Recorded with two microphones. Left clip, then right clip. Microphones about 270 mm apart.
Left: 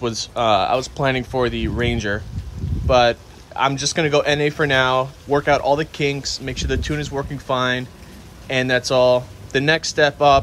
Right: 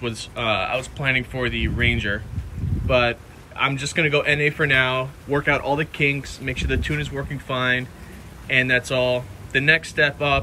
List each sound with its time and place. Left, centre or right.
0.0 s speech: centre